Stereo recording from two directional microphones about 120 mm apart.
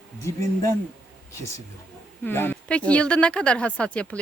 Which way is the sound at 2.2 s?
15° left (ahead or behind).